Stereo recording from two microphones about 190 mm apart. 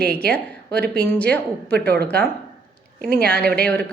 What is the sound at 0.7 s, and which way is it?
Speech, 55° right (ahead or behind).